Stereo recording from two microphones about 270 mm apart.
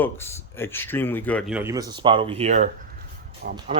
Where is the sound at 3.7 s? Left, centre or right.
Right.